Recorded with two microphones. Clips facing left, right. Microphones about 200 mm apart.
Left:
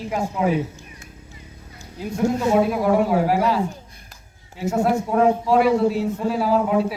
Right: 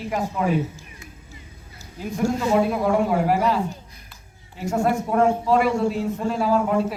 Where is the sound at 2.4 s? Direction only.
5° left (ahead or behind).